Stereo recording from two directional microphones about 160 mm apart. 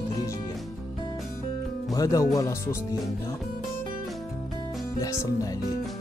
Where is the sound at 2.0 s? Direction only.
20° left (ahead or behind).